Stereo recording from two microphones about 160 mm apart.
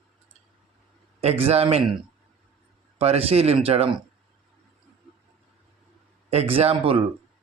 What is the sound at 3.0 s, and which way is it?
A man's voice, 40° right (ahead or behind).